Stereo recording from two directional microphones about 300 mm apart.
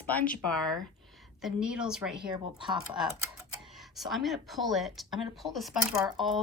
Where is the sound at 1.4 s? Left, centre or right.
Centre.